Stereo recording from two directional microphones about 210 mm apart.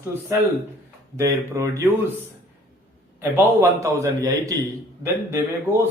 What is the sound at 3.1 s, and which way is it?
Speech, 10° right (ahead or behind).